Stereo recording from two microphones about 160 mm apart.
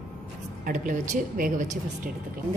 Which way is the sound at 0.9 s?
55° right (ahead or behind).